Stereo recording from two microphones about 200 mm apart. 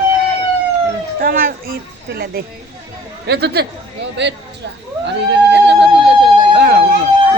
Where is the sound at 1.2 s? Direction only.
45° right (ahead or behind).